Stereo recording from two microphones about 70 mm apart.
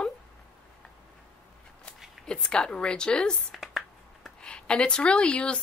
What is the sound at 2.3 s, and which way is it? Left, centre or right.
A woman's voice, centre.